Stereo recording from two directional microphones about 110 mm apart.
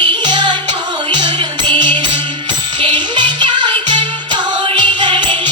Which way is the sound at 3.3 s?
45° right (ahead or behind).